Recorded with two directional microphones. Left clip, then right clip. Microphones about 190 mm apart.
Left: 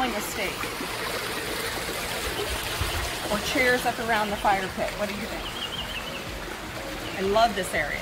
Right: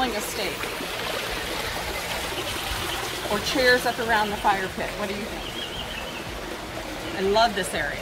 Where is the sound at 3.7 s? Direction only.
30° left (ahead or behind).